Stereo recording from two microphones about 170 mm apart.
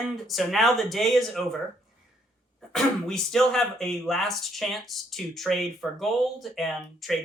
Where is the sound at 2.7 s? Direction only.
5° left (ahead or behind).